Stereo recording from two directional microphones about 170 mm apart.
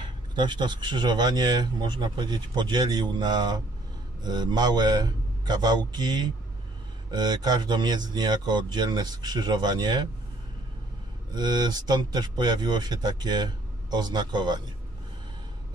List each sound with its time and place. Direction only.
0.0 s speech: 25° right (ahead or behind)
11.3 s speech: 25° right (ahead or behind)